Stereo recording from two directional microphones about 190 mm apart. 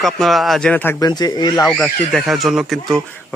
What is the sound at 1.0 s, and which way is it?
Speech, 20° left (ahead or behind).